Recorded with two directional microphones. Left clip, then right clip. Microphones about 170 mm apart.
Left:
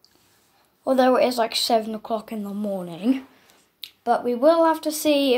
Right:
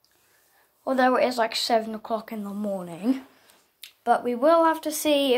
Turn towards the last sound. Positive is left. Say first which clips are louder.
# left 2 dB
turn(degrees=5)  # may be behind; listen again after turning